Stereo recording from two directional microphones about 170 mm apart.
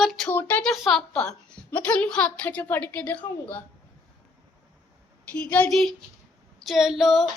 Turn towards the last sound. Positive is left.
turn(degrees=0)  # may be behind; listen again after turning